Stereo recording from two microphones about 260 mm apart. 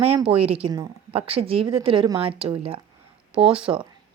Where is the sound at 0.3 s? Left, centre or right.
Right.